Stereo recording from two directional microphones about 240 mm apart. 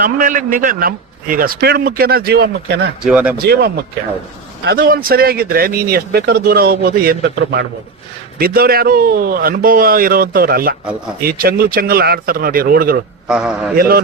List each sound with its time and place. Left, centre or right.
0.0 s speech: right
3.0 s speech: centre
3.3 s speech: right
13.2 s speech: centre
13.7 s speech: right